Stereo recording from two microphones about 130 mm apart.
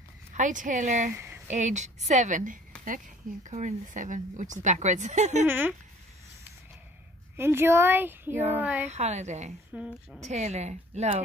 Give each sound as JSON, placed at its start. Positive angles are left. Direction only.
{"t": 0.3, "sound": "a woman's voice", "side_deg": -75}
{"t": 1.1, "sound": "a sound", "side_deg": -15}
{"t": 1.5, "sound": "a woman's voice", "side_deg": -65}
{"t": 3.4, "sound": "a woman's voice", "side_deg": -70}
{"t": 5.5, "sound": "speech", "side_deg": -15}
{"t": 7.3, "sound": "speech", "side_deg": -20}
{"t": 8.8, "sound": "speech", "side_deg": -60}
{"t": 9.7, "sound": "speech", "side_deg": -10}
{"t": 10.3, "sound": "speech", "side_deg": -60}